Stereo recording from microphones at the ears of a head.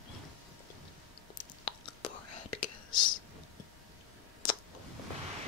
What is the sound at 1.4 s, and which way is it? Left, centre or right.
Whispering, left.